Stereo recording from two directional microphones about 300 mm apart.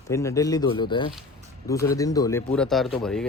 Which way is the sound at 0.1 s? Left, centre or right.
Centre.